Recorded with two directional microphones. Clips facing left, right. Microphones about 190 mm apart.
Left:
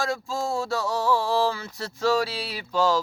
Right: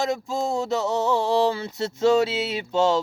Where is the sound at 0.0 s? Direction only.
20° right (ahead or behind).